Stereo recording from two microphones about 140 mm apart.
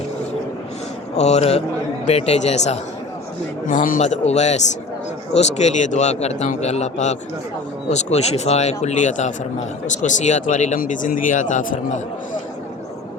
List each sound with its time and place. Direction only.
1.1 s a man's voice: 50° left (ahead or behind)
3.7 s a man's voice: 65° left (ahead or behind)